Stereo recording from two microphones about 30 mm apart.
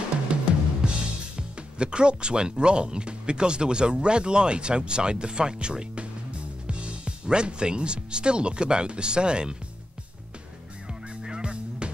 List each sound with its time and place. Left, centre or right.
0.3 s drum: right
0.8 s speech: right
11.2 s honk: right